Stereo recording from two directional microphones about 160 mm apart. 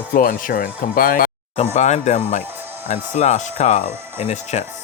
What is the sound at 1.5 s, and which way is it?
Speech, 45° left (ahead or behind).